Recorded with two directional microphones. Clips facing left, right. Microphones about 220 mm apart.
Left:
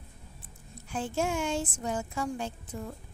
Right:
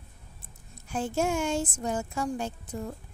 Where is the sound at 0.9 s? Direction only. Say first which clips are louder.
Right 3 dB; 45° right (ahead or behind).